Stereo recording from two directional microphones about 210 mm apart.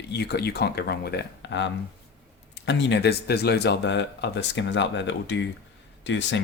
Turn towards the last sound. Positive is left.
turn(degrees=60)  # may be behind; listen again after turning